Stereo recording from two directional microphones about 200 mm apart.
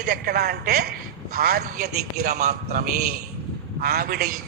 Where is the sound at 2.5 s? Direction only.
50° right (ahead or behind).